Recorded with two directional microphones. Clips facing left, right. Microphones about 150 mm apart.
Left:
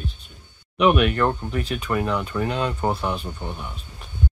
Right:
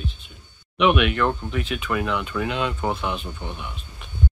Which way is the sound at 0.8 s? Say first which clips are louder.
Left 1 dB; 40° left (ahead or behind).